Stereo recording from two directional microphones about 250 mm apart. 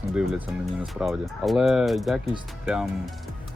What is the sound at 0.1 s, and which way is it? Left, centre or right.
Speech, centre.